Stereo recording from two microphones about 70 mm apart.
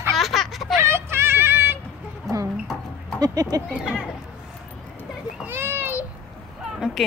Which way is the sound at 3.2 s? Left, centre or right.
Right.